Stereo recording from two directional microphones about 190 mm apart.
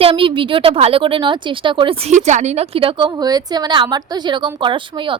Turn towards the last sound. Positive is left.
turn(degrees=-25)  # may be behind; listen again after turning